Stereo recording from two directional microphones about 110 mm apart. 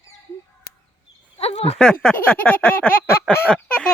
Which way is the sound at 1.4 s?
65° left (ahead or behind).